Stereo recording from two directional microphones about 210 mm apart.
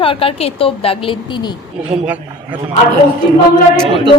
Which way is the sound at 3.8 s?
25° right (ahead or behind).